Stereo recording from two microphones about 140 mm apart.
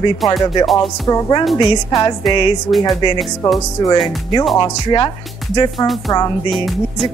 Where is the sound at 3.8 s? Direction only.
30° left (ahead or behind).